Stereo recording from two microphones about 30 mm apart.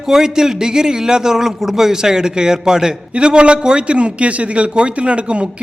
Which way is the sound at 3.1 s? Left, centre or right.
Right.